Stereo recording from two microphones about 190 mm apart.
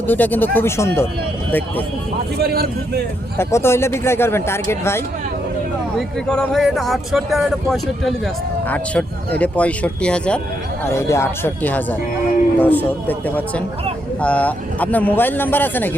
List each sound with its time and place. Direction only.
0.1 s speech: 10° left (ahead or behind)
2.4 s a man's voice: 55° right (ahead or behind)
3.3 s speech: 15° left (ahead or behind)
6.0 s speech: 5° left (ahead or behind)